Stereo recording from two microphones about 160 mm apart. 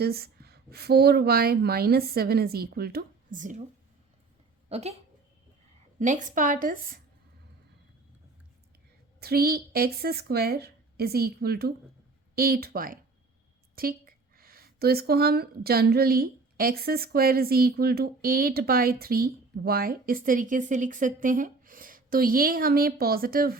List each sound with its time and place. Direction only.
0.0 s speech: 80° right; by 3.6 s 55° right (ahead or behind)
4.7 s speech: 40° right (ahead or behind)
6.0 s speech: 50° right (ahead or behind)
9.2 s speech: 75° right (ahead or behind)